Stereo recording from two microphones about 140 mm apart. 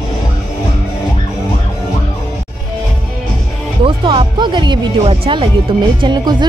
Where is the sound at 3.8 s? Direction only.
40° right (ahead or behind).